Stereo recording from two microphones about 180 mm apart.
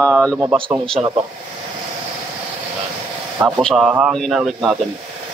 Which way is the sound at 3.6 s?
5° left (ahead or behind).